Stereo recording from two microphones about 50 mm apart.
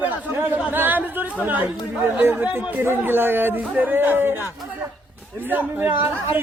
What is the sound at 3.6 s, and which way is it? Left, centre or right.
Speech, right.